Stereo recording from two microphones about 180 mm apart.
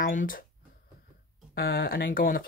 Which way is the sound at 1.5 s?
55° left (ahead or behind).